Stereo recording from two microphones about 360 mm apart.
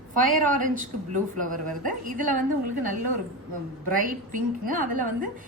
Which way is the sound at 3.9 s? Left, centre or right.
Right.